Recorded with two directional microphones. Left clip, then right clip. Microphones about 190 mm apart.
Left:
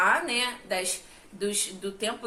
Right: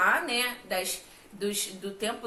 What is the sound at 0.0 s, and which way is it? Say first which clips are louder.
A woman's voice: left 1 dB; 15° left (ahead or behind).